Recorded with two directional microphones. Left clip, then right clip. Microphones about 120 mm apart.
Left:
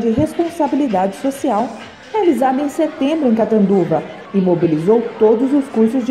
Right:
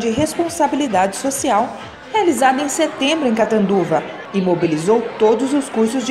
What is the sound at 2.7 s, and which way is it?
Speech, centre (ahead or behind).